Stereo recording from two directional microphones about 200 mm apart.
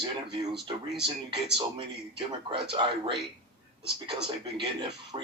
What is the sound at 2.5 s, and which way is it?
Speech, 25° right (ahead or behind).